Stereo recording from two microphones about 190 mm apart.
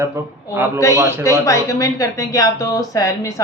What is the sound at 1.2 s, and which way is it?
Speech, 15° left (ahead or behind).